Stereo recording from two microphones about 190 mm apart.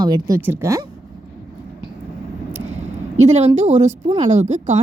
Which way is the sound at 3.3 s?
35° right (ahead or behind).